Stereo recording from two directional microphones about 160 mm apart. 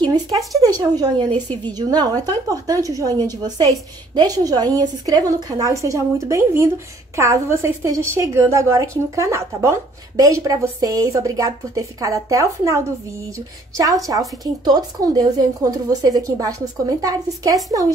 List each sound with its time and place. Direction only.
0.0 s a woman's voice: 25° right (ahead or behind)
1.3 s a woman's voice: 10° left (ahead or behind)
1.7 s a woman's voice: 25° right (ahead or behind)
14.4 s a woman's voice: 25° right (ahead or behind)